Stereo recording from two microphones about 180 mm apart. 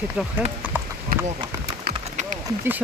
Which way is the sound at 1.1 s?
55° right (ahead or behind).